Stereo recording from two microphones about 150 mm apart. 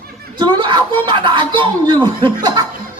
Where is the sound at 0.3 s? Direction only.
30° right (ahead or behind).